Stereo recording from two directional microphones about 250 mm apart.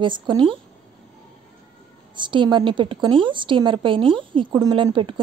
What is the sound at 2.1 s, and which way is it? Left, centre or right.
A woman's voice, centre.